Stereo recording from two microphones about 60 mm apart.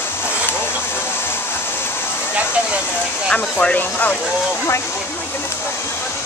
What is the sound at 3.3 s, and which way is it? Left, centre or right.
Speech, centre.